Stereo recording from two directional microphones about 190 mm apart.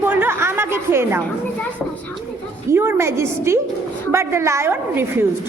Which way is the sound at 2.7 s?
10° right (ahead or behind).